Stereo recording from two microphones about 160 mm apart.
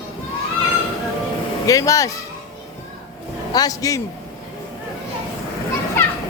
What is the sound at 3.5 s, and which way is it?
Speech, 20° left (ahead or behind).